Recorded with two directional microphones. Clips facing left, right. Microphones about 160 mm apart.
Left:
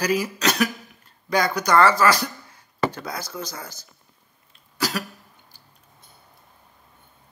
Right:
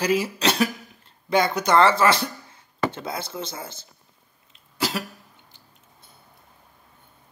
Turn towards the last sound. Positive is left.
turn(degrees=-25)  # may be behind; listen again after turning